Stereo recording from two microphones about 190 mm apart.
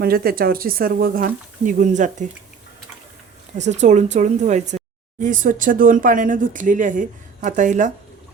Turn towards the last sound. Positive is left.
turn(degrees=-40)  # may be behind; listen again after turning